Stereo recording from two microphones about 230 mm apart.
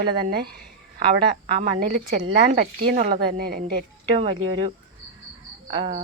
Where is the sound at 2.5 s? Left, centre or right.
Right.